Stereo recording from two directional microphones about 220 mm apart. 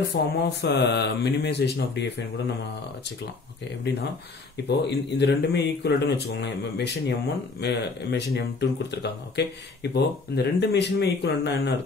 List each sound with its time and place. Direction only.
0.1 s speech: 50° left (ahead or behind)
4.6 s speech: 50° left (ahead or behind)